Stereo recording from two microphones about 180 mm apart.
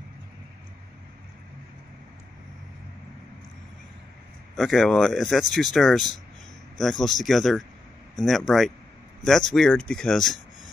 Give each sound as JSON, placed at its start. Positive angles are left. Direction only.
{"t": 4.6, "sound": "speech", "side_deg": 0}